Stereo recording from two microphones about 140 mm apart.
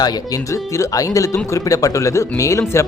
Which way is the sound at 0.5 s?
25° left (ahead or behind).